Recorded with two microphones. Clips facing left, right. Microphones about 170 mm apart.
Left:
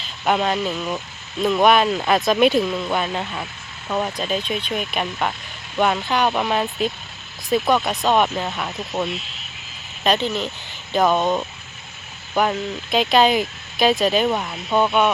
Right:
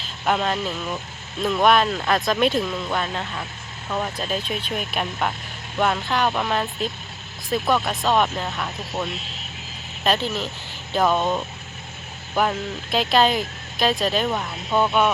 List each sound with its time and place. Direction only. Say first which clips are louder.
0.0 s speech: left 2 dB; centre (ahead or behind)
4.2 s speech: left 3 dB; 5° right (ahead or behind)
11.2 s speech: left 3 dB; 15° left (ahead or behind)
12.3 s speech: left 2 dB; centre (ahead or behind)